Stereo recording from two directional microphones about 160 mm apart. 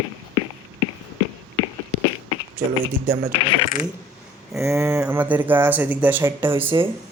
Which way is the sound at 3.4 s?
35° left (ahead or behind).